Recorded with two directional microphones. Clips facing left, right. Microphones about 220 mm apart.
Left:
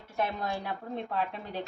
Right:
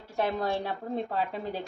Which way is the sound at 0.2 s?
35° right (ahead or behind).